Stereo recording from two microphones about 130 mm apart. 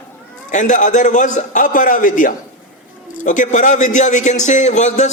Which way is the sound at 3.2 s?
75° left (ahead or behind).